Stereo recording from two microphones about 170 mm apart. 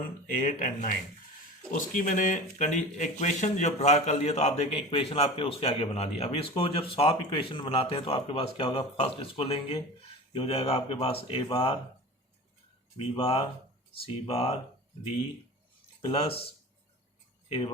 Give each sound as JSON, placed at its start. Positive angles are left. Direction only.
{"t": 0.4, "sound": "speech", "side_deg": 55}
{"t": 13.0, "sound": "speech", "side_deg": 35}
{"t": 16.0, "sound": "speech", "side_deg": 35}